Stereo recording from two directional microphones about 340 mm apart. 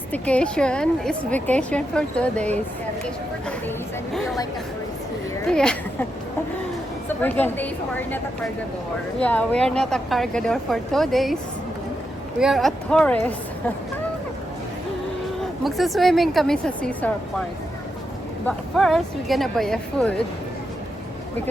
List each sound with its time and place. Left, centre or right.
0.1 s a woman's voice: centre
5.5 s a woman's voice: centre
7.2 s a woman's voice: centre
12.4 s a woman's voice: centre
15.6 s a woman's voice: centre
18.4 s a woman's voice: centre